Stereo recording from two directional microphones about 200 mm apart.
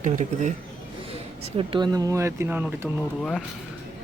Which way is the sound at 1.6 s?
25° right (ahead or behind).